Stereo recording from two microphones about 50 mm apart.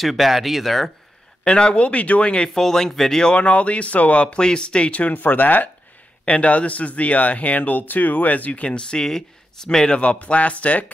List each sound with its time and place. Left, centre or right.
0.0 s speech: centre
1.4 s speech: centre; by 5.7 s left
6.2 s speech: left